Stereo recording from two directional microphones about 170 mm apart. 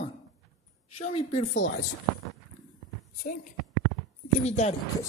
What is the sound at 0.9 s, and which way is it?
Speech, 40° left (ahead or behind).